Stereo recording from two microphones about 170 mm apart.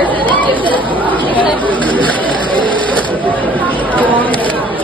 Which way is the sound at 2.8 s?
10° left (ahead or behind).